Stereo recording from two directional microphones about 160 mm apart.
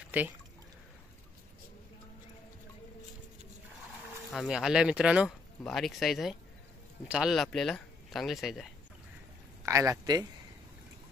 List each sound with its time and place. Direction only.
0.1 s speech: 10° right (ahead or behind)
4.3 s speech: centre (ahead or behind)
9.7 s speech: 20° right (ahead or behind)